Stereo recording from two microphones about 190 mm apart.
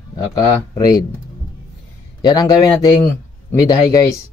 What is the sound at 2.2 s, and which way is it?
Speech, 20° left (ahead or behind).